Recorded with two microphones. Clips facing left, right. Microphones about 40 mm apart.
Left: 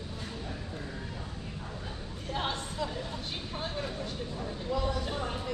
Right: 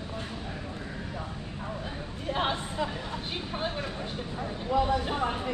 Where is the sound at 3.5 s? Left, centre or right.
Right.